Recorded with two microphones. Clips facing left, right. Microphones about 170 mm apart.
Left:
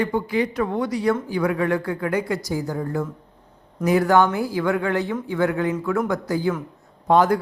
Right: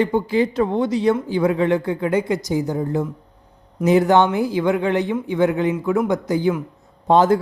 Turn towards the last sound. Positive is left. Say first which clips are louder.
# right 2 dB
turn(degrees=-25)  # may be behind; listen again after turning